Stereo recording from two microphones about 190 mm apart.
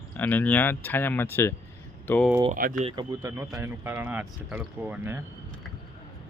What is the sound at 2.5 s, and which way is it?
Speech, 45° right (ahead or behind).